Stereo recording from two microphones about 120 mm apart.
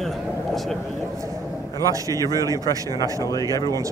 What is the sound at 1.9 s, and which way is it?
A man's voice, 30° right (ahead or behind).